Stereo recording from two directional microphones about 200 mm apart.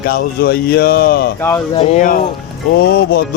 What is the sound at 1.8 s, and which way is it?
Speech, 30° left (ahead or behind).